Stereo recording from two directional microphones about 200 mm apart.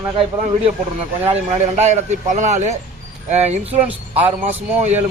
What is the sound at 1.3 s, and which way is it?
A man's voice, 35° right (ahead or behind).